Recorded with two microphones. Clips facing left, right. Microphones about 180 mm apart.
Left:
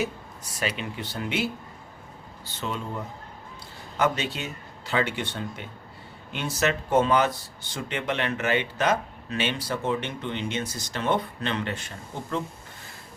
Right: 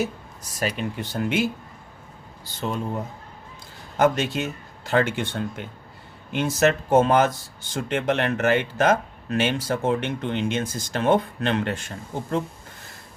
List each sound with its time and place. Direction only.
0.6 s speech: 45° right (ahead or behind)
2.6 s speech: 45° right (ahead or behind)